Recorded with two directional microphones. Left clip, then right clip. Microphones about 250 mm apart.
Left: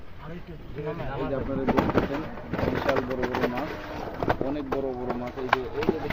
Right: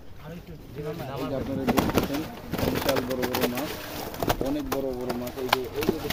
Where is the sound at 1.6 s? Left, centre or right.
Right.